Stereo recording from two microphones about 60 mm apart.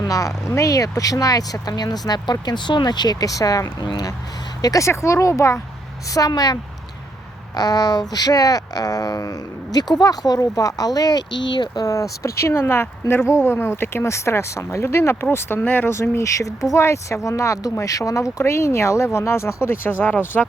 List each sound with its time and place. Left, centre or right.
0.0 s speech: left
4.9 s speech: left
6.1 s speech: left
7.6 s speech: left
11.8 s speech: left
15.9 s speech: left
19.6 s speech: left